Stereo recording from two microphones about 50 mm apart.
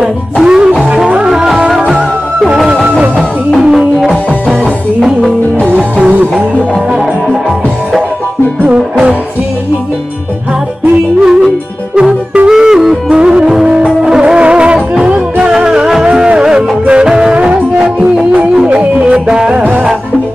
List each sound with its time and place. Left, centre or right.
0.0 s music: centre
2.7 s music: right
3.2 s music: centre
5.9 s music: right
8.6 s music: centre
11.2 s music: centre
18.5 s music: centre
18.8 s music: right
19.6 s music: right